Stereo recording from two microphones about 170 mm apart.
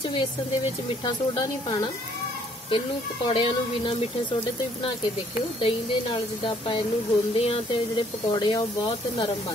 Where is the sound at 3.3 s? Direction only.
30° left (ahead or behind).